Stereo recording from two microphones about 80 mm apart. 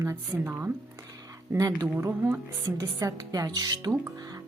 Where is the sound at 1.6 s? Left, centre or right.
Right.